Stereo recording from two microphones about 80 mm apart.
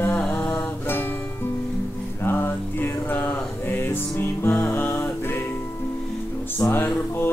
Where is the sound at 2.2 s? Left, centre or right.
Left.